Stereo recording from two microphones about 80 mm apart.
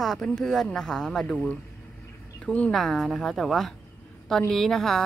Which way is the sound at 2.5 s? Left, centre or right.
Centre.